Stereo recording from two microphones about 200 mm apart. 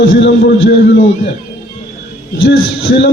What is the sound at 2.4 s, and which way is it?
Speech, 55° left (ahead or behind).